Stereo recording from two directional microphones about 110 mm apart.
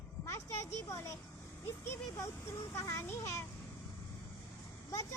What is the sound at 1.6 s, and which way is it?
A child's voice, 20° left (ahead or behind).